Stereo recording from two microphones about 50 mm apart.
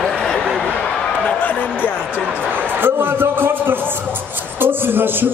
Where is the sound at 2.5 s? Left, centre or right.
Right.